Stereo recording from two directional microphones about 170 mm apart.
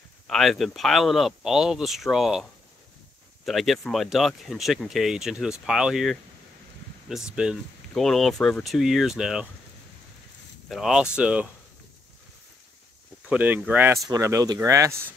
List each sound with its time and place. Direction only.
0.3 s speech: centre (ahead or behind)
3.4 s speech: centre (ahead or behind)
10.7 s speech: centre (ahead or behind)
13.3 s speech: 10° right (ahead or behind)